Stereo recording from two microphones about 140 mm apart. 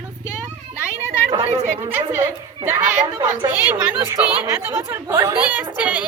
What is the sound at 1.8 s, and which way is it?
Speech, 15° right (ahead or behind).